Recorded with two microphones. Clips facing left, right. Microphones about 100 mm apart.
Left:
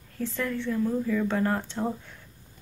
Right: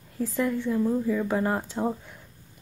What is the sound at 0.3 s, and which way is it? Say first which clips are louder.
Speech: right 4 dB; 15° right (ahead or behind).